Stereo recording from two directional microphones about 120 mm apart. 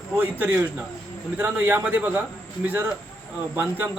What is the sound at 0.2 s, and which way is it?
Speech, 15° right (ahead or behind).